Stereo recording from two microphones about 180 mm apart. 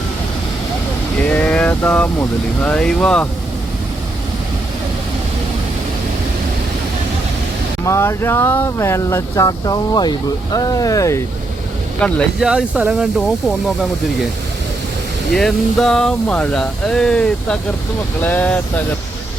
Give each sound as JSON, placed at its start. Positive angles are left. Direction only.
{"t": 1.3, "sound": "speech", "side_deg": 5}
{"t": 7.9, "sound": "speech", "side_deg": 15}
{"t": 11.9, "sound": "speech", "side_deg": 5}
{"t": 12.5, "sound": "speech", "side_deg": -5}
{"t": 15.3, "sound": "speech", "side_deg": 0}